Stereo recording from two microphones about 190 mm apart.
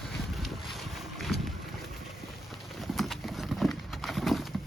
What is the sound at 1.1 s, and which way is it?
Boat, centre (ahead or behind).